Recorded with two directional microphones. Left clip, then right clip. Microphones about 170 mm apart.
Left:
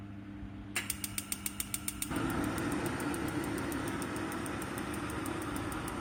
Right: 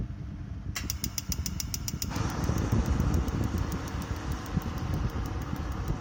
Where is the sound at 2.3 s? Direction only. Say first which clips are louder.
Right 1 dB; 35° right (ahead or behind).